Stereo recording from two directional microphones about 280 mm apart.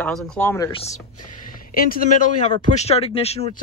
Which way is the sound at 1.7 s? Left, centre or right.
Left.